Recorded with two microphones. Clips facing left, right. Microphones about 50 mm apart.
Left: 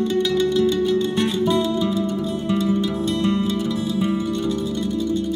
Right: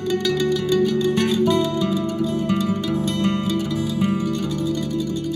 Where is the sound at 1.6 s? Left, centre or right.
Right.